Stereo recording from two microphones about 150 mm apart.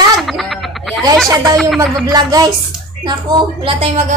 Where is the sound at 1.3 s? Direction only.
20° right (ahead or behind).